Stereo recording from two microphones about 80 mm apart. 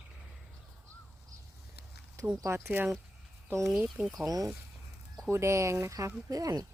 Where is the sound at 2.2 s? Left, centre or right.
Right.